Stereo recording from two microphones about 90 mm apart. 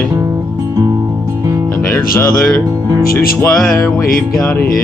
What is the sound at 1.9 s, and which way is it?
Music, 30° left (ahead or behind).